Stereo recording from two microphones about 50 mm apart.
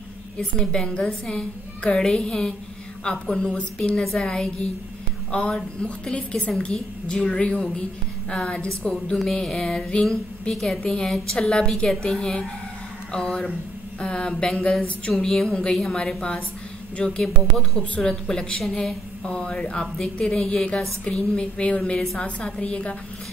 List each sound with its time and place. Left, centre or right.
0.4 s a woman's voice: centre
15.2 s speech: centre
15.5 s a woman's voice: centre